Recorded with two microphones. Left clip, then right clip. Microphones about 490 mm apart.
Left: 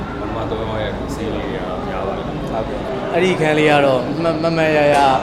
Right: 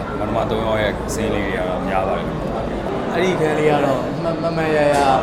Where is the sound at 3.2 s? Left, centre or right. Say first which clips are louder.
Left 3 dB; left.